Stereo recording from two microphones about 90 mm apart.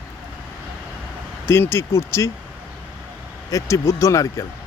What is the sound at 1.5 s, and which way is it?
Speech, 25° left (ahead or behind).